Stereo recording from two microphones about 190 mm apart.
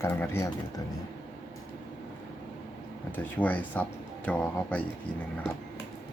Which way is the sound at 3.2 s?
10° left (ahead or behind).